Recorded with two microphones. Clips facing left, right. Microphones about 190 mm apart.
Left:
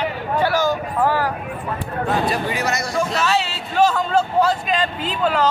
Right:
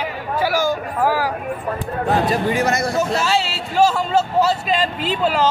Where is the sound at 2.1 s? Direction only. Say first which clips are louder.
Right 3 dB; 45° right (ahead or behind).